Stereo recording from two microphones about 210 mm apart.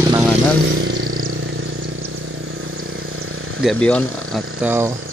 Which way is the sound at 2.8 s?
80° right.